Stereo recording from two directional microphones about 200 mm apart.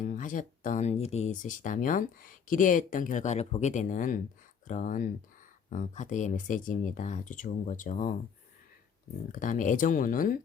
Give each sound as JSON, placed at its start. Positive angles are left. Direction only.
{"t": 0.0, "sound": "speech", "side_deg": 40}
{"t": 9.3, "sound": "speech", "side_deg": 40}